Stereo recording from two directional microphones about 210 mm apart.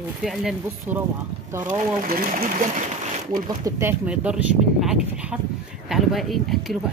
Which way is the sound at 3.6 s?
10° right (ahead or behind).